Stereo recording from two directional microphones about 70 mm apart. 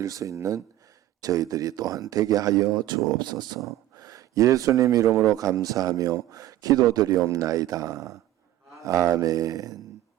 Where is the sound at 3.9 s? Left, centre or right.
Right.